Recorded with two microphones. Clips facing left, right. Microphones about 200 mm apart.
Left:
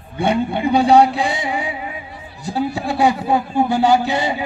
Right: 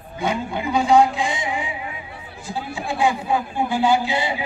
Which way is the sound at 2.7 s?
40° left (ahead or behind).